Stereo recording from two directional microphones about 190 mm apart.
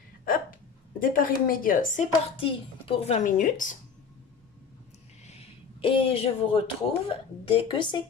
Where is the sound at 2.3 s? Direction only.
30° left (ahead or behind).